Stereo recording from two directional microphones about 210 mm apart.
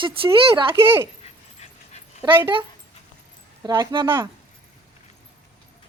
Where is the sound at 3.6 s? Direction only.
20° right (ahead or behind).